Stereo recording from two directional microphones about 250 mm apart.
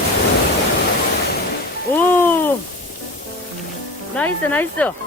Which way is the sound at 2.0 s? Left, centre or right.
Centre.